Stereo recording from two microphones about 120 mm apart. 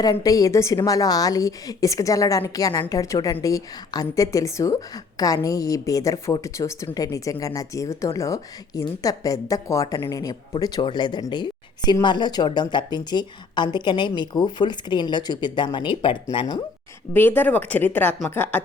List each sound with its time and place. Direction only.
0.0 s a woman's voice: 30° left (ahead or behind)
17.2 s speech: 15° left (ahead or behind)